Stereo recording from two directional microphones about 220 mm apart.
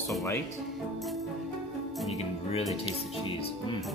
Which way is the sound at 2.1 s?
25° left (ahead or behind).